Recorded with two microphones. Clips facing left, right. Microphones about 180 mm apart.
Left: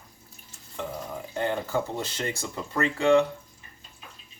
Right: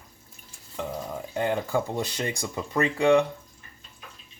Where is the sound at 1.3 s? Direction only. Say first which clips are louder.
Right 2 dB; 15° right (ahead or behind).